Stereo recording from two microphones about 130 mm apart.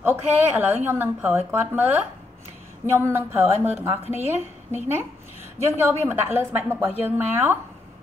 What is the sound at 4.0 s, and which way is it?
Speech, 55° left (ahead or behind).